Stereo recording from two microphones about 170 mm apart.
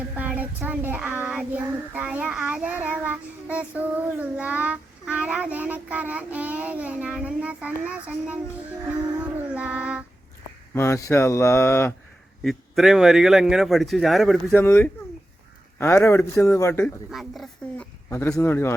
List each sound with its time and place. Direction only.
0.2 s child singing: 10° right (ahead or behind)
10.8 s speech: 15° left (ahead or behind)
12.4 s a man's voice: centre (ahead or behind)
14.5 s speech: 15° left (ahead or behind)
17.1 s speech: centre (ahead or behind)
18.1 s speech: 15° left (ahead or behind)